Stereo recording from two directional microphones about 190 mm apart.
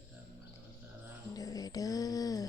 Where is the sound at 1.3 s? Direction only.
20° left (ahead or behind).